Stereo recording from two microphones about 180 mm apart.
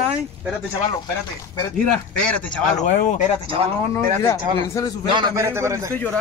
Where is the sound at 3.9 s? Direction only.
15° left (ahead or behind).